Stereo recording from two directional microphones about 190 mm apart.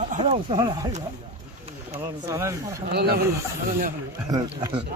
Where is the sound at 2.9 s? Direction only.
55° right (ahead or behind).